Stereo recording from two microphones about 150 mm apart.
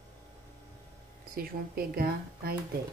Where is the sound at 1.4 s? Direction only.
85° right.